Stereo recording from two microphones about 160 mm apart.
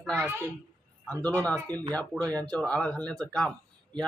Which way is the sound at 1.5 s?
25° right (ahead or behind).